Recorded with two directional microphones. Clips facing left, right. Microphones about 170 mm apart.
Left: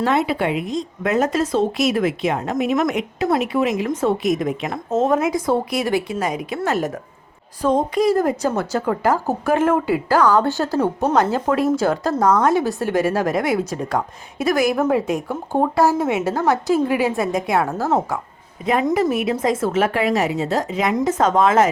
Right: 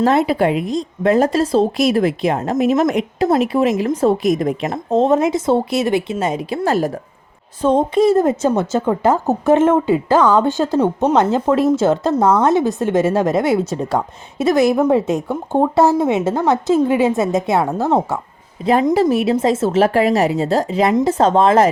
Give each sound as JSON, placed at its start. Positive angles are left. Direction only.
{"t": 0.0, "sound": "a woman's voice", "side_deg": -40}